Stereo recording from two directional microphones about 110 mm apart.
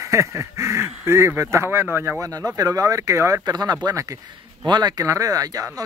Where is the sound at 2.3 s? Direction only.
35° right (ahead or behind).